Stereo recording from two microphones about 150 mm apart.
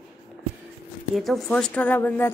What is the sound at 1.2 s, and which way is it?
Speech, centre (ahead or behind).